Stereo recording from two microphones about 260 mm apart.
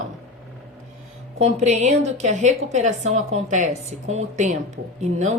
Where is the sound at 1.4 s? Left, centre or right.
Right.